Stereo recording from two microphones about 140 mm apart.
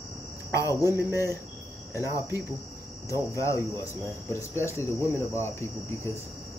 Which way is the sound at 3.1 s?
20° left (ahead or behind).